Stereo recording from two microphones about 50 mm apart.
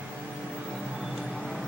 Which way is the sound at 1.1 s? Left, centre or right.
Centre.